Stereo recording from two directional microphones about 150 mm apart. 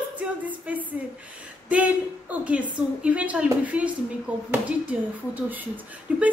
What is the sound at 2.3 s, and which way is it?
A woman's voice, 10° right (ahead or behind).